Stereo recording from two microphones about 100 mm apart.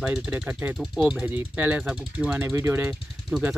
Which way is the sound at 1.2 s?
15° right (ahead or behind).